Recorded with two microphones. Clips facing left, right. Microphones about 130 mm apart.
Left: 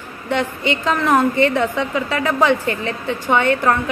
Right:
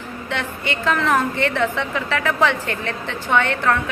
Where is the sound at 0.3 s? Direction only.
15° left (ahead or behind).